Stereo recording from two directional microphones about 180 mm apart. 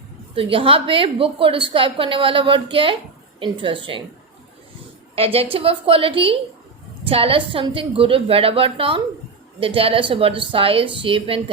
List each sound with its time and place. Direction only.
0.3 s a woman's voice: 30° right (ahead or behind)
5.1 s a woman's voice: 35° right (ahead or behind)